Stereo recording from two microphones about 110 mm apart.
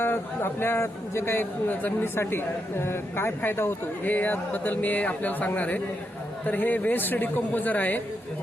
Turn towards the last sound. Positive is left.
turn(degrees=15)  # may be behind; listen again after turning